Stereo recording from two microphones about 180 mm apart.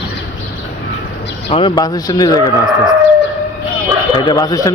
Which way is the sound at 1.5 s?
30° left (ahead or behind).